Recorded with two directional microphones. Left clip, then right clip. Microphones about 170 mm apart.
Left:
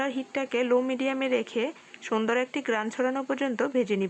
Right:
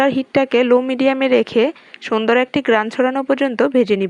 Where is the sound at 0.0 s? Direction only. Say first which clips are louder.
Right 14 dB; 35° right (ahead or behind).